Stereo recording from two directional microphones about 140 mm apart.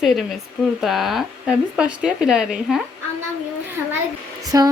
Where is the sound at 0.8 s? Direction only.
Centre (ahead or behind).